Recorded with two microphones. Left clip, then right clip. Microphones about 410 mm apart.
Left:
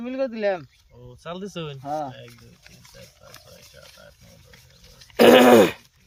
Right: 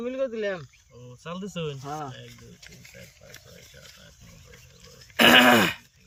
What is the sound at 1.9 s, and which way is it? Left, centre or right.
Speech, left.